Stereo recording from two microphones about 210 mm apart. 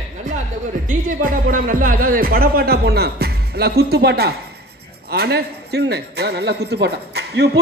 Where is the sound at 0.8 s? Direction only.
40° right (ahead or behind).